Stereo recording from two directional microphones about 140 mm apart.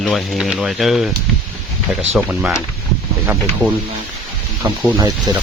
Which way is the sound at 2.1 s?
5° right (ahead or behind).